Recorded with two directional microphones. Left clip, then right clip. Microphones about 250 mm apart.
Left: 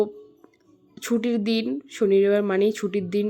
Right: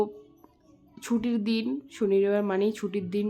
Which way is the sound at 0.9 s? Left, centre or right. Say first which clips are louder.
Left 5 dB; centre.